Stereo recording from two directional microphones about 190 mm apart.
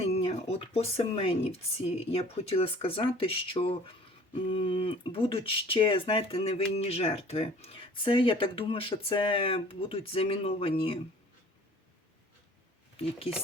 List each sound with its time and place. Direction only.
0.0 s speech: 30° left (ahead or behind)
13.0 s speech: 30° left (ahead or behind)